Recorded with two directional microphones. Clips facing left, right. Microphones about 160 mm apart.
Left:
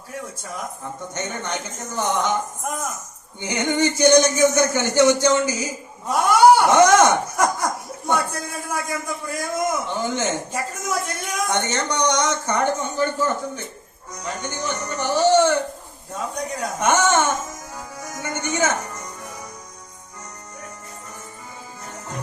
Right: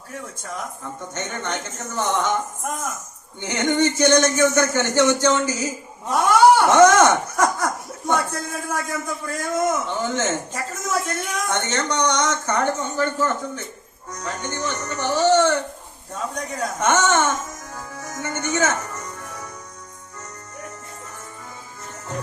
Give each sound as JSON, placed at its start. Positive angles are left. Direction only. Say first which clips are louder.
{"t": 1.1, "sound": "speech", "louder": "even", "side_deg": 10}
{"t": 3.4, "sound": "speech", "louder": "right 1 dB", "side_deg": 10}